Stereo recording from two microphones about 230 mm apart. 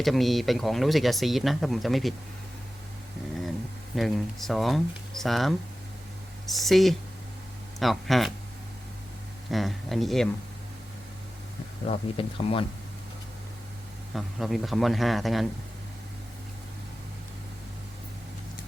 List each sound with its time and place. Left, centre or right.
0.0 s speech: centre
3.9 s speech: centre
9.5 s speech: centre
11.9 s speech: left
14.1 s speech: centre